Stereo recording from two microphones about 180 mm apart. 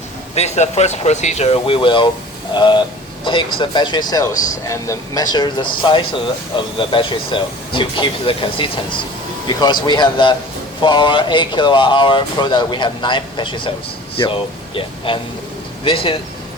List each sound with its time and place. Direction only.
0.3 s speech: 40° left (ahead or behind)